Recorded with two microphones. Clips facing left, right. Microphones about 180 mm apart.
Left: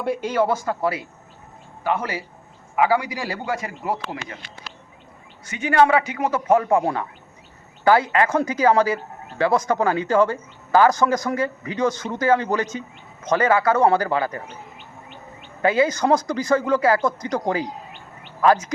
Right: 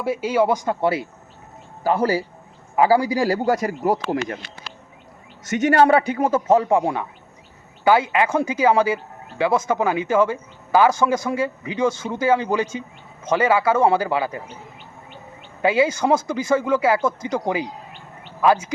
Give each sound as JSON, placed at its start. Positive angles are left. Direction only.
{"t": 0.0, "sound": "a man's voice", "side_deg": -5}
{"t": 5.7, "sound": "a man's voice", "side_deg": -35}
{"t": 15.6, "sound": "speech", "side_deg": -10}